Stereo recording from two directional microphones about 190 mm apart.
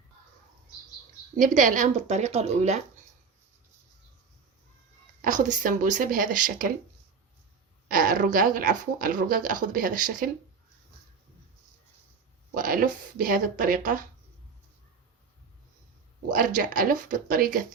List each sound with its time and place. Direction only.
1.4 s speech: 40° right (ahead or behind)
5.2 s speech: 40° right (ahead or behind)
7.9 s speech: 45° right (ahead or behind)
12.5 s speech: 45° right (ahead or behind)
16.3 s speech: 45° right (ahead or behind)